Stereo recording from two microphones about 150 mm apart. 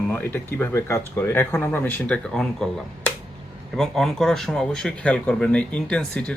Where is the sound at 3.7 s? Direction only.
5° left (ahead or behind).